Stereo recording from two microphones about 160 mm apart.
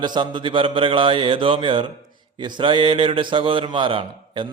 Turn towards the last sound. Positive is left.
turn(degrees=-30)  # may be behind; listen again after turning